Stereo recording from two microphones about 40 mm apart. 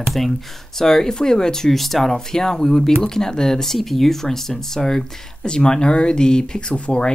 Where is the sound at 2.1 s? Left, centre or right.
Centre.